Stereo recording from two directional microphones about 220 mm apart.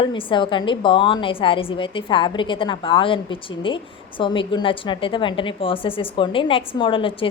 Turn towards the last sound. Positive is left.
turn(degrees=25)  # may be behind; listen again after turning